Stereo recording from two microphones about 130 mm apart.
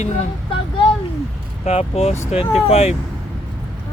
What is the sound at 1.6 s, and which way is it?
Speech, 50° left (ahead or behind).